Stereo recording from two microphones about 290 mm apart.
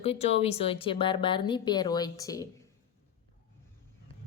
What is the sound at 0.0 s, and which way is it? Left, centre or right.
Speech, left.